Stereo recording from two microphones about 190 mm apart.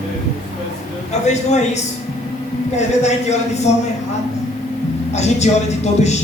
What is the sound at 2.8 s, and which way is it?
Speech, 35° left (ahead or behind).